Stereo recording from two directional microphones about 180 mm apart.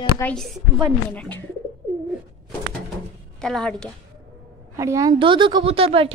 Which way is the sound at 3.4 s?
5° left (ahead or behind).